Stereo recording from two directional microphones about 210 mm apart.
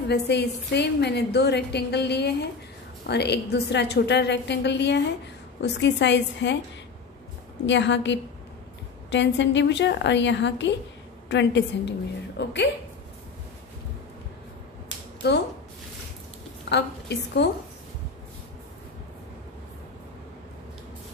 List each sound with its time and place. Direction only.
0.1 s a woman's voice: 55° left (ahead or behind)
7.6 s a woman's voice: 60° left (ahead or behind)
15.2 s a woman's voice: 50° left (ahead or behind)
16.6 s a woman's voice: 55° left (ahead or behind)